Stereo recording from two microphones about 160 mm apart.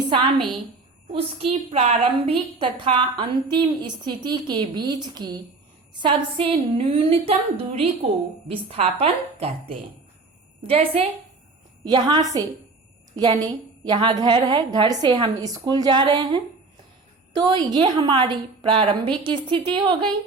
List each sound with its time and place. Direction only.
0.1 s a woman's voice: 30° right (ahead or behind)